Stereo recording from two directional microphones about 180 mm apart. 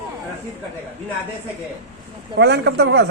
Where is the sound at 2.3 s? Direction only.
70° right (ahead or behind).